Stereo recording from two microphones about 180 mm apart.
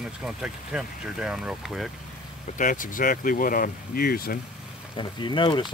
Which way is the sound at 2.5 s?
50° left (ahead or behind).